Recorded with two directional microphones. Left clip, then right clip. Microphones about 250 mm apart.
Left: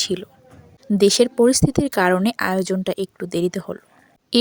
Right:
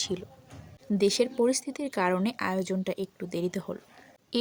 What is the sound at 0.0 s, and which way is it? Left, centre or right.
A woman's voice, left.